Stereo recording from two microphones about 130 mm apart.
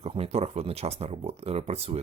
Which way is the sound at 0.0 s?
50° right (ahead or behind).